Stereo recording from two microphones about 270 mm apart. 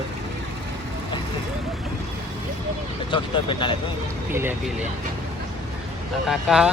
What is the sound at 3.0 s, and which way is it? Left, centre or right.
Speech, centre.